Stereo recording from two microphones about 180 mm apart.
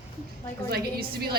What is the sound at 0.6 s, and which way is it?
Speech, 60° right (ahead or behind).